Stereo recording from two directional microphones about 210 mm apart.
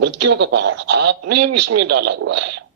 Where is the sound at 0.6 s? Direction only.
60° right (ahead or behind).